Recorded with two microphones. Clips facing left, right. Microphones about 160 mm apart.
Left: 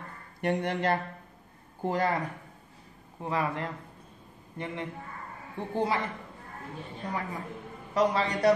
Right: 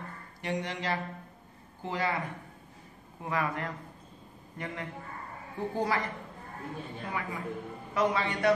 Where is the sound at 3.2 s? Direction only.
30° left (ahead or behind).